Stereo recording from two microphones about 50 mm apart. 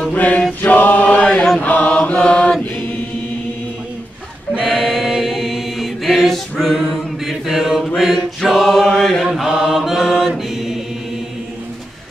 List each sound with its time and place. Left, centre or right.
0.1 s mantra: left
0.6 s choir: left
1.2 s chant: centre
1.6 s mantra: left
4.6 s choir: centre
6.6 s mantra: centre
8.8 s mantra: centre
9.2 s mantra: centre